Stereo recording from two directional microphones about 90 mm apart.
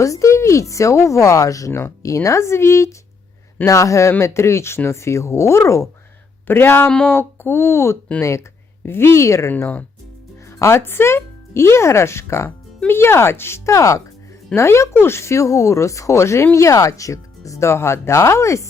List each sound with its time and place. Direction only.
0.0 s speech: 35° left (ahead or behind)
9.5 s speech: 20° left (ahead or behind)
10.6 s speech: 30° left (ahead or behind)